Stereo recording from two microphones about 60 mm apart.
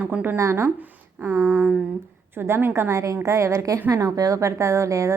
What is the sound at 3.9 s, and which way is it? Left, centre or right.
A woman's voice, right.